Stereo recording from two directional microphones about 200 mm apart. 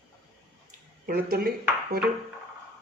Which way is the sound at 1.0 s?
45° right (ahead or behind).